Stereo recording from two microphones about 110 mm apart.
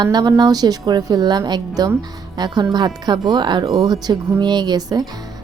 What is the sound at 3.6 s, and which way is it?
Speech, 35° right (ahead or behind).